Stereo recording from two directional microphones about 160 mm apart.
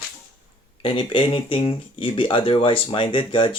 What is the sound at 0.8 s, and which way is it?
Speech, 35° left (ahead or behind).